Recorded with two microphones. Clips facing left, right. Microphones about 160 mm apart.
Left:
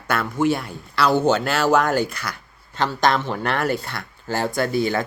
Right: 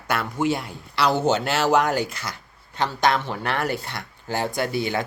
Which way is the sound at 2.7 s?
10° right (ahead or behind).